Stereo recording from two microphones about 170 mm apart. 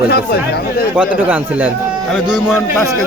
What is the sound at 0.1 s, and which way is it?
Speech, 70° left (ahead or behind).